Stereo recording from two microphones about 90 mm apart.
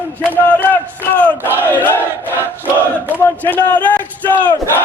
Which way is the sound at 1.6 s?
25° left (ahead or behind).